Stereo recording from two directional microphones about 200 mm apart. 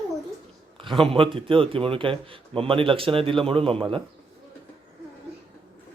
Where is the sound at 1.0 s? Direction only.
25° right (ahead or behind).